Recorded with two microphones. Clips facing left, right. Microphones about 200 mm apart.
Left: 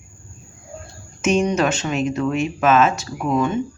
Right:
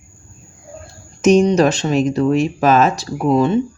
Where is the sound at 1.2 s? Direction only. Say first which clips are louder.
Right 6 dB; 35° right (ahead or behind).